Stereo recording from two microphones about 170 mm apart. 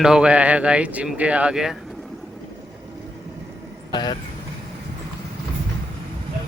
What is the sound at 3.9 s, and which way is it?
Speech, 25° left (ahead or behind).